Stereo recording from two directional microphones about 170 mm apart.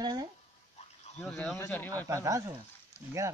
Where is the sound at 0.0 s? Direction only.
25° right (ahead or behind).